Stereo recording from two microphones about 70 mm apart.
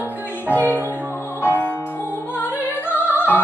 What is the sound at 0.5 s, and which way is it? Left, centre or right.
Music, right.